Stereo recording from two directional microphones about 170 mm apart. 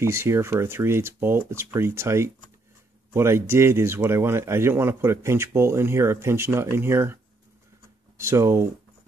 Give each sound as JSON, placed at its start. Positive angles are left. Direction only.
{"t": 0.0, "sound": "speech", "side_deg": -15}
{"t": 8.2, "sound": "speech", "side_deg": -15}